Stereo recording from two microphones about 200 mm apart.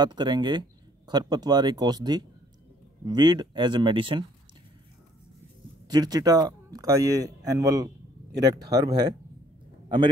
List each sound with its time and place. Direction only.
0.0 s speech: 20° right (ahead or behind)
5.9 s speech: 20° right (ahead or behind)